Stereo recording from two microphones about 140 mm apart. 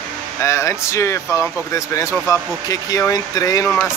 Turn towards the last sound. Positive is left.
turn(degrees=20)  # may be behind; listen again after turning